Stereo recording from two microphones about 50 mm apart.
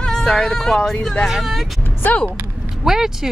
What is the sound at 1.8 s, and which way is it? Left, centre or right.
Speech, left.